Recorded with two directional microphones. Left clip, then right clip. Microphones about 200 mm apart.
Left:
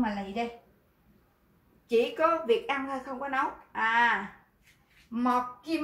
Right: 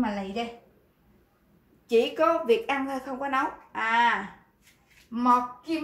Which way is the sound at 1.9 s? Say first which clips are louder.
Right 3 dB; 35° right (ahead or behind).